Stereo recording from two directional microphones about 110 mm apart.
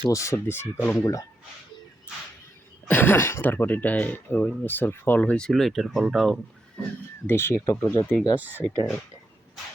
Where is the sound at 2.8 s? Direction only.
20° left (ahead or behind); by 6.4 s centre (ahead or behind).